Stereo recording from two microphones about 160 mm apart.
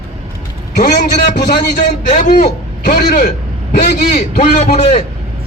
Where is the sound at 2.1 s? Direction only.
50° left (ahead or behind).